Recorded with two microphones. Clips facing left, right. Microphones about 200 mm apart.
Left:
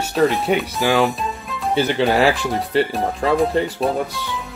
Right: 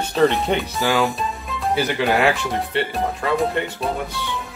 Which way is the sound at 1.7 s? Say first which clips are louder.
Left 3 dB; 30° left (ahead or behind).